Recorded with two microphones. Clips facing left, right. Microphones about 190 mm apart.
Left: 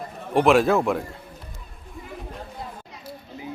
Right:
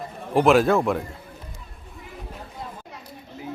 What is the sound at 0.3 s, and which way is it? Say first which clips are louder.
Speech: even; centre (ahead or behind).